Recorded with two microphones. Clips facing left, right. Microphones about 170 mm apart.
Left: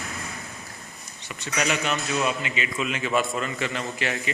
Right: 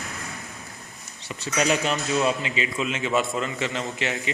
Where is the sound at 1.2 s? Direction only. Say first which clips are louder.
Right 3 dB; 35° right (ahead or behind).